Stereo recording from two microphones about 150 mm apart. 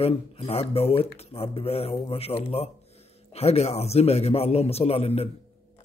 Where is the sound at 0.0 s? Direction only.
40° left (ahead or behind).